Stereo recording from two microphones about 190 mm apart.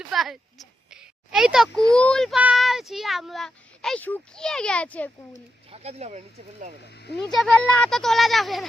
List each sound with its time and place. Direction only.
0.1 s a child's voice: centre (ahead or behind)
5.7 s speech: 35° right (ahead or behind)
7.3 s a child's voice: centre (ahead or behind)